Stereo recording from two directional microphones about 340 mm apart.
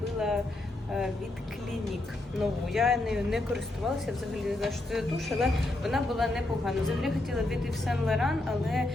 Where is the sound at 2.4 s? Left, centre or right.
Centre.